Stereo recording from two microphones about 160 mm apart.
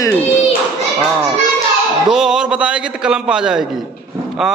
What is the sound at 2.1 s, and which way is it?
A man's voice, 5° right (ahead or behind).